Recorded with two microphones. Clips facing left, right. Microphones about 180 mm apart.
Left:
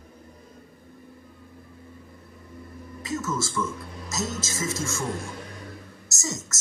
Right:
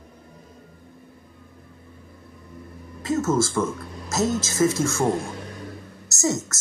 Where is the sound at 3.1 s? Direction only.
50° right (ahead or behind).